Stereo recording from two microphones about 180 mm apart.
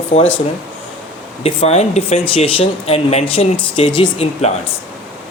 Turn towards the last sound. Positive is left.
turn(degrees=30)  # may be behind; listen again after turning